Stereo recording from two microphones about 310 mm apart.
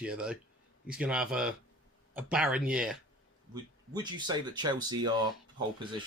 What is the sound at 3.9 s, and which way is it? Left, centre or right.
Speech, centre.